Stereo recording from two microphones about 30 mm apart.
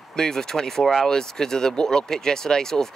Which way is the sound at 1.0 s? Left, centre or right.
Centre.